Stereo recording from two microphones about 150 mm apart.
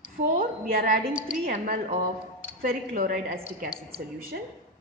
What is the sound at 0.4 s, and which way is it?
Speech, 70° right (ahead or behind).